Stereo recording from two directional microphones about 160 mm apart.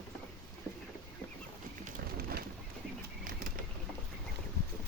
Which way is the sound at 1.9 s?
70° right (ahead or behind).